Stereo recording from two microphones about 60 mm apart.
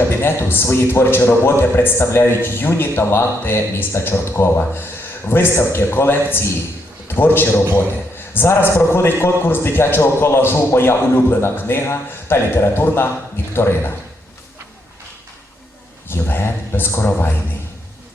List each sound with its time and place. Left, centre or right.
0.1 s a man's voice: left
16.0 s a man's voice: left